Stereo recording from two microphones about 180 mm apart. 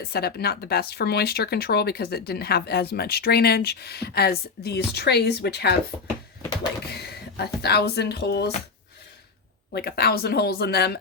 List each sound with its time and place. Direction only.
0.0 s speech: 60° left (ahead or behind)
5.9 s speech: 20° left (ahead or behind)
6.9 s speech: 65° left (ahead or behind)
9.7 s speech: 60° left (ahead or behind)